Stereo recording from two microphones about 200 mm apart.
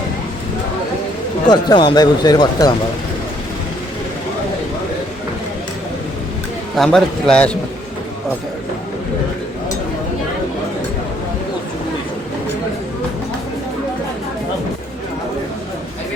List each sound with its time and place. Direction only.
1.5 s speech: 20° left (ahead or behind)
6.7 s a man's voice: centre (ahead or behind)